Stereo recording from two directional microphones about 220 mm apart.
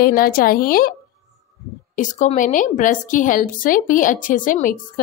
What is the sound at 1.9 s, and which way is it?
A woman's voice, 35° left (ahead or behind).